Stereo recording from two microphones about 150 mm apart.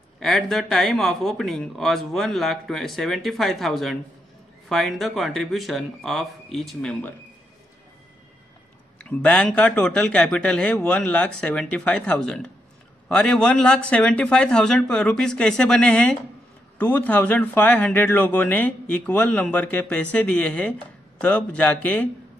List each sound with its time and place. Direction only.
0.2 s speech: centre (ahead or behind)
8.9 s speech: 10° left (ahead or behind)